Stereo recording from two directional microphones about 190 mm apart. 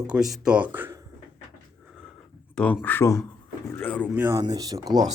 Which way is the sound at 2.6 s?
10° left (ahead or behind).